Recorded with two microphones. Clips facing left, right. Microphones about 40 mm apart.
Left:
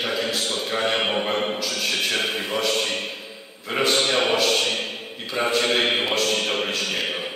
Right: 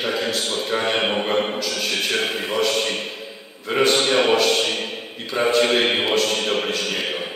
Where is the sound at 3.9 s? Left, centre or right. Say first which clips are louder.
Right 3 dB; centre.